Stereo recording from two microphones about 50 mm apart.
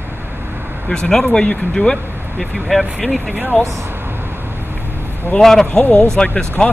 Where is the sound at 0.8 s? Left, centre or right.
Centre.